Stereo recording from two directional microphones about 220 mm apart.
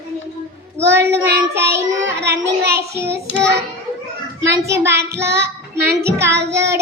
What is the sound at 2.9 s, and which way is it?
Child singing, 10° right (ahead or behind).